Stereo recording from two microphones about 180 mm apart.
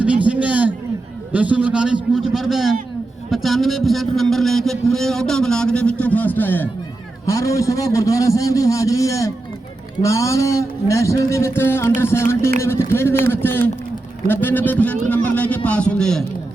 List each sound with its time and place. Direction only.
0.0 s a man's voice: 5° right (ahead or behind)